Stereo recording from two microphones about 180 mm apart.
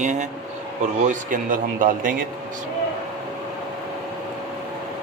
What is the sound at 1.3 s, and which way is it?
Speech, 50° right (ahead or behind).